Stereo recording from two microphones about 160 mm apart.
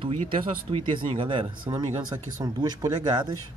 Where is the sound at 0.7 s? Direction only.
35° right (ahead or behind).